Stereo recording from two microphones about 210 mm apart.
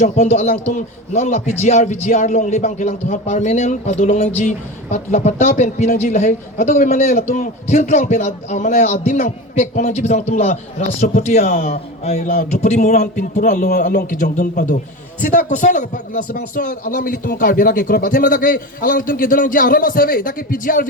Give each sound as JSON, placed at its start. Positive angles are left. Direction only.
{"t": 0.0, "sound": "speech", "side_deg": 35}